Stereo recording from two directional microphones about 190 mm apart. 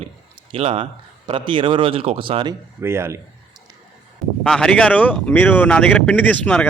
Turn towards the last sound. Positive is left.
turn(degrees=5)  # may be behind; listen again after turning